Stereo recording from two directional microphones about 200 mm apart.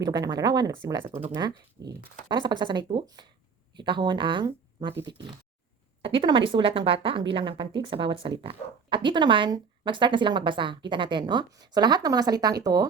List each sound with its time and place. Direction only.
0.0 s speech: 20° right (ahead or behind)